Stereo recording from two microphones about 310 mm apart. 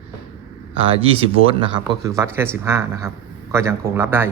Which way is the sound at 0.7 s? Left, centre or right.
Centre.